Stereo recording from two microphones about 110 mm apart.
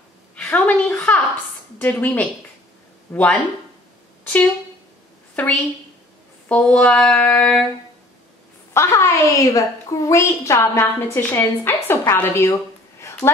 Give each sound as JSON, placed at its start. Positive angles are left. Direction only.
{"t": 0.4, "sound": "a sound", "side_deg": 15}
{"t": 1.8, "sound": "female singing", "side_deg": 15}
{"t": 3.1, "sound": "speech", "side_deg": 15}
{"t": 5.3, "sound": "a woman's voice", "side_deg": 10}
{"t": 6.5, "sound": "female singing", "side_deg": 10}
{"t": 8.7, "sound": "a woman's voice", "side_deg": 25}